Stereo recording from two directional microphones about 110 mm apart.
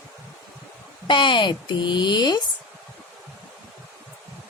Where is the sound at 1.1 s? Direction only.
50° left (ahead or behind).